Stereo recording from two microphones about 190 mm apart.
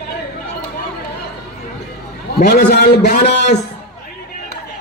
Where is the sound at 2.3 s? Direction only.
60° left (ahead or behind).